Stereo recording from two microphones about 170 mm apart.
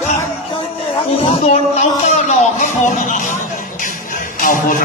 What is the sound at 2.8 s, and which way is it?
Music, 45° left (ahead or behind).